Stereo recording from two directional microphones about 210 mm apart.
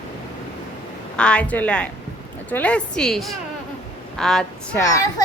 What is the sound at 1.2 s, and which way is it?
A woman's voice, 5° left (ahead or behind).